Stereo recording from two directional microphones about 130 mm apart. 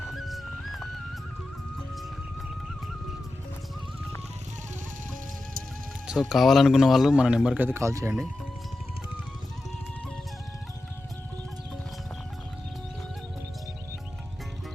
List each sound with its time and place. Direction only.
0.1 s music: centre (ahead or behind)
6.1 s a man's voice: 5° right (ahead or behind); by 8.1 s 20° right (ahead or behind)